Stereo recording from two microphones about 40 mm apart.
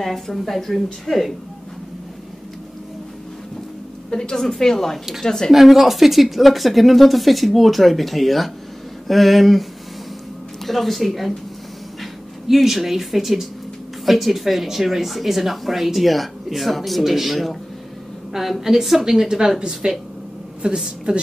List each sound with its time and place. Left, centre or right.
0.0 s speech: centre
4.1 s a woman's voice: centre
5.5 s speech: centre
12.4 s a woman's voice: centre; by 21.2 s right